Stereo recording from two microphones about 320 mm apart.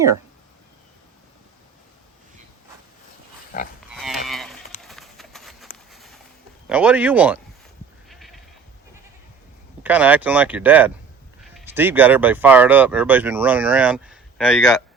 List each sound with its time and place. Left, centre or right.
3.5 s livestock: left
3.8 s livestock: centre
4.8 s horse: centre
5.7 s a sound: centre
6.7 s speech: centre
8.1 s a sound: centre
9.8 s speech: centre